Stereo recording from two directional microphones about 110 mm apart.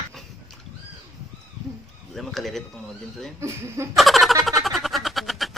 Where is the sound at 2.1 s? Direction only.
Centre (ahead or behind).